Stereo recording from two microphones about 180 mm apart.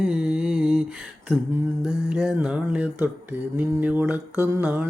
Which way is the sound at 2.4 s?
5° right (ahead or behind).